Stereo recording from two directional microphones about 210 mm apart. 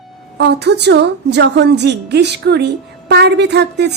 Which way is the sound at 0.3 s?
50° right (ahead or behind).